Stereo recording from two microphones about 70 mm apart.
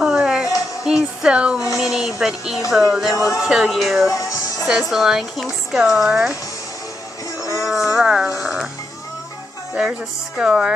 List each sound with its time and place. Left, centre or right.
0.0 s music: centre
1.8 s speech: centre
3.2 s speech: left
3.4 s speech: centre
4.1 s speech: left
4.6 s speech: centre
7.5 s a sound: centre
8.4 s music: centre
9.8 s speech: centre